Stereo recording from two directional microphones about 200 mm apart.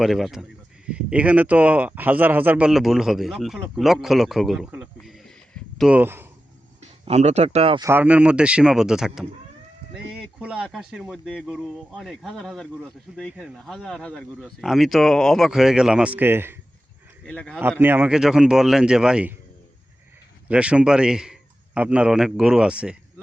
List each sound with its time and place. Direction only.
0.0 s speech: centre (ahead or behind)
7.0 s speech: 30° right (ahead or behind)
7.9 s speech: 10° right (ahead or behind)
17.2 s speech: 5° left (ahead or behind)
17.6 s speech: 10° right (ahead or behind)
20.5 s speech: 5° right (ahead or behind)